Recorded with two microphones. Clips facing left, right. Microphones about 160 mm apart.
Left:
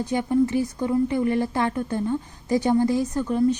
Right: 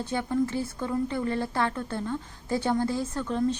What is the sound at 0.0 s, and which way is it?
A woman's voice, 15° left (ahead or behind).